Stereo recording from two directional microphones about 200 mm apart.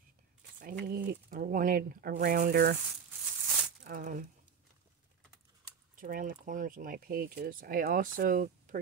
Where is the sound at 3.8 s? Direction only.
40° right (ahead or behind).